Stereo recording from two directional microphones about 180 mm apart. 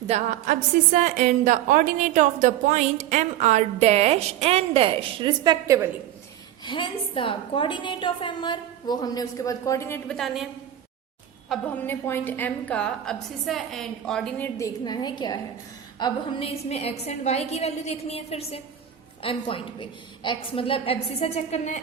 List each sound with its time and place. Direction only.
0.1 s a woman's voice: 40° right (ahead or behind); by 5.9 s 15° right (ahead or behind)
6.7 s a woman's voice: 25° left (ahead or behind); by 14.7 s 10° left (ahead or behind)
14.8 s a woman's voice: 25° left (ahead or behind); by 21.8 s 40° left (ahead or behind)